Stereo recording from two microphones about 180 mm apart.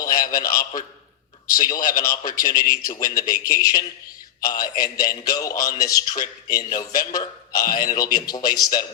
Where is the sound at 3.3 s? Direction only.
20° left (ahead or behind).